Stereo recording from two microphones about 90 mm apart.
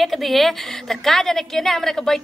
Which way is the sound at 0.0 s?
Centre (ahead or behind).